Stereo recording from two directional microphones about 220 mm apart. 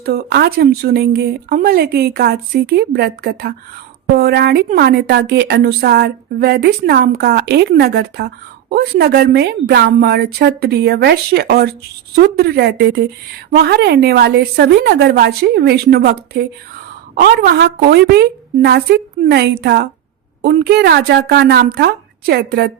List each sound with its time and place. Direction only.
0.0 s a woman's voice: 45° right (ahead or behind)